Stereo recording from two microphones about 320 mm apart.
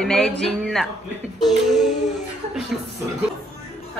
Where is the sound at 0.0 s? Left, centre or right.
Centre.